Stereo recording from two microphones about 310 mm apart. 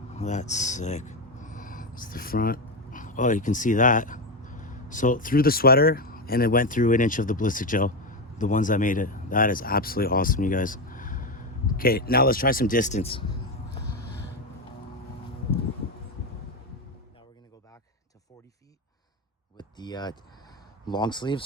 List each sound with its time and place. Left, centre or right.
0.1 s speech: left
19.5 s a sound: centre
20.8 s speech: centre